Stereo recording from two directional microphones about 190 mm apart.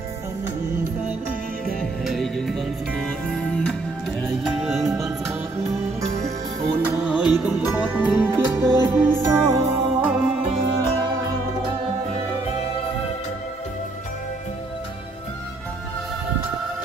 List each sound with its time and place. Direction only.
1.8 s music: centre (ahead or behind)
6.6 s music: 10° right (ahead or behind)
10.5 s music: 20° right (ahead or behind)